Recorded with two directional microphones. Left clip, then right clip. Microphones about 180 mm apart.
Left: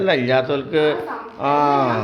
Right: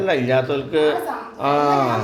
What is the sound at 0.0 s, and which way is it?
A man's voice, 15° left (ahead or behind).